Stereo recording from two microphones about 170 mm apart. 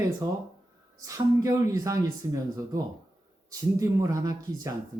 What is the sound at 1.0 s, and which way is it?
Speech, 20° right (ahead or behind).